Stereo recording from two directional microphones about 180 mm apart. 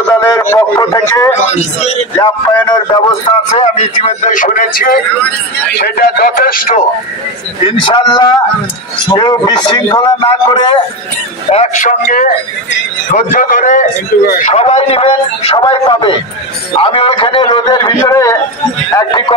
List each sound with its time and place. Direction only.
0.2 s speech: 15° left (ahead or behind)
1.5 s a man's voice: 35° left (ahead or behind)
2.1 s a man's voice: 25° left (ahead or behind)
3.5 s speech: 35° left (ahead or behind); by 4.9 s 50° left (ahead or behind)
5.8 s speech: 60° left (ahead or behind)
7.6 s a man's voice: 25° left (ahead or behind)
11.5 s speech: 40° left (ahead or behind)
13.3 s a man's voice: 45° left (ahead or behind); by 19.3 s 25° left (ahead or behind)